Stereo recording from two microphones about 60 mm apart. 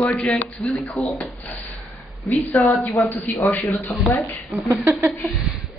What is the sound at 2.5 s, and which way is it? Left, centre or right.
Speech, left.